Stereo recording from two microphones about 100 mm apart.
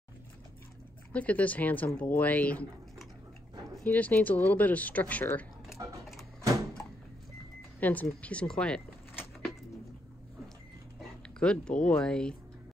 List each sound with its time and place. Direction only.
1.1 s speech: 15° left (ahead or behind)
3.8 s speech: 15° left (ahead or behind)
5.8 s a sound: 30° right (ahead or behind)
7.8 s speech: 15° left (ahead or behind)
11.0 s speech: 10° left (ahead or behind)